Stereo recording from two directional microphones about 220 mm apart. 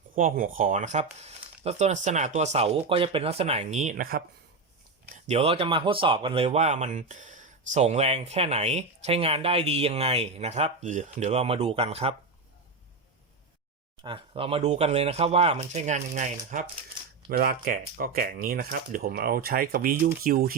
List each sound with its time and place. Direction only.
0.2 s speech: 35° right (ahead or behind)
5.2 s speech: 30° right (ahead or behind)
14.0 s speech: 25° right (ahead or behind); by 20.6 s 40° right (ahead or behind)